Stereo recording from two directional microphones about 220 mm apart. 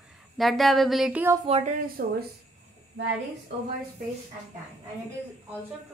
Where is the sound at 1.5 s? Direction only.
30° right (ahead or behind).